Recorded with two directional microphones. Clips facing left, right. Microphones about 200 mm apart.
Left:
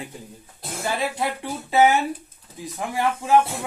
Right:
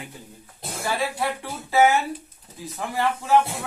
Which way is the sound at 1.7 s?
15° left (ahead or behind).